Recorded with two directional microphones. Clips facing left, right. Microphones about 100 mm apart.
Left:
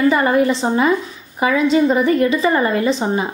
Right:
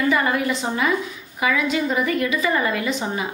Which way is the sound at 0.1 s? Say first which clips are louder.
Left 6 dB; 35° left (ahead or behind).